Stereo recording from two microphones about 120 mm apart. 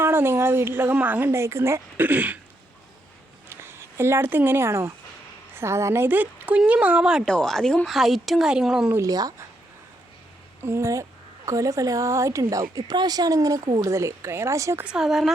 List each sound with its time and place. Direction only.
0.0 s speech: 20° right (ahead or behind)
3.5 s speech: 20° right (ahead or behind)
7.3 s speech: 5° left (ahead or behind)
8.9 s speech: 25° right (ahead or behind)
10.6 s speech: 20° right (ahead or behind)
14.8 s speech: 5° right (ahead or behind)